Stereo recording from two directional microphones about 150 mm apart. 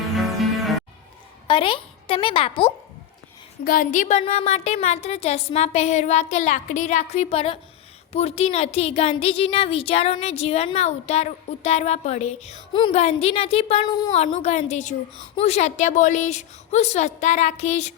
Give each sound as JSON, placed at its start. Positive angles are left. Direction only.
{"t": 0.2, "sound": "music", "side_deg": 0}
{"t": 1.5, "sound": "a woman's voice", "side_deg": 35}
{"t": 3.6, "sound": "a woman's voice", "side_deg": 65}